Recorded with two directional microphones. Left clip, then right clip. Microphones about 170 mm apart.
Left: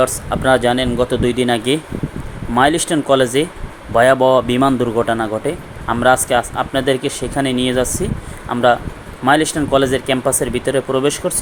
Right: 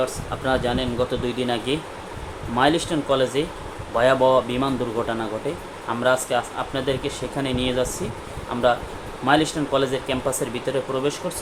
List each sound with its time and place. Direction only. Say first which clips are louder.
0.0 s speech: left 9 dB; 40° left (ahead or behind)